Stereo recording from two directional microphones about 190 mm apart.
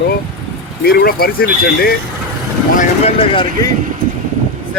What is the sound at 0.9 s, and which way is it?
Speech, 55° left (ahead or behind).